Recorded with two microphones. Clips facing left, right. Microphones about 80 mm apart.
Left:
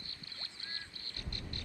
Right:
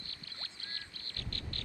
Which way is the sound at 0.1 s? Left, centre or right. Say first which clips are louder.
Right 1 dB; left.